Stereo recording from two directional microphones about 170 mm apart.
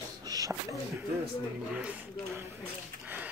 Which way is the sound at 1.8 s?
5° right (ahead or behind).